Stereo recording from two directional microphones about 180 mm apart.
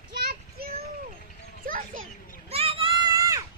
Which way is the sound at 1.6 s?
50° right (ahead or behind).